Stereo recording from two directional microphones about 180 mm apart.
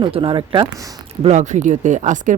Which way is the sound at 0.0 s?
30° right (ahead or behind).